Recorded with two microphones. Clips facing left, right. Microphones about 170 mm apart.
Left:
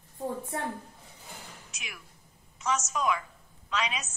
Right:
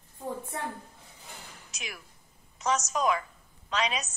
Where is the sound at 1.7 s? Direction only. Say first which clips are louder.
Right 4 dB; 35° right (ahead or behind).